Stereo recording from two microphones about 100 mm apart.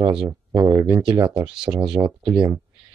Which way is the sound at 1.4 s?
10° right (ahead or behind).